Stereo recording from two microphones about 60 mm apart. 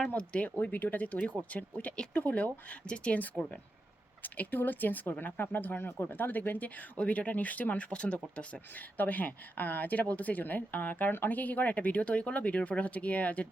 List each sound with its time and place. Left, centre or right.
0.1 s speech: left